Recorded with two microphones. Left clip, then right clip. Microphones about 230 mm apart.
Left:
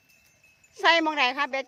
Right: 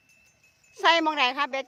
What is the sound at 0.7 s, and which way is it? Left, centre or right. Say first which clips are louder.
Speech: even; centre.